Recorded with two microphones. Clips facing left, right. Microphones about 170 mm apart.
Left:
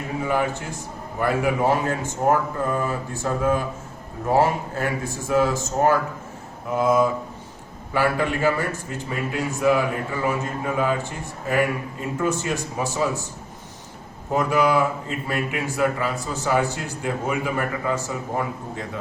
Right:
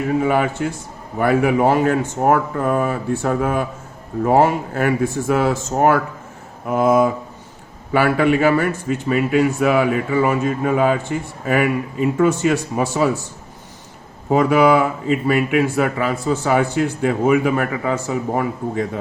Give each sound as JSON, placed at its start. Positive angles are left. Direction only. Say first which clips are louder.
{"t": 0.2, "sound": "speech", "louder": "right 1 dB", "side_deg": -60}
{"t": 7.9, "sound": "a man's voice", "louder": "right 7 dB", "side_deg": -65}
{"t": 14.3, "sound": "speech", "louder": "right 7 dB", "side_deg": -60}